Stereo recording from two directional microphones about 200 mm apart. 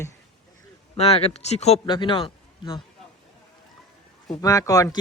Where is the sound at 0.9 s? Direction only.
30° left (ahead or behind).